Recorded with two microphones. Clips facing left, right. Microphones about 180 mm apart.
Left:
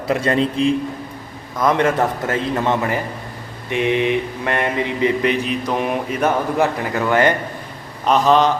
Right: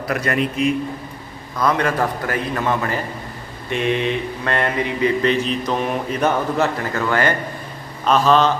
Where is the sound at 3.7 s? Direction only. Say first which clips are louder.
Left 2 dB; 15° left (ahead or behind).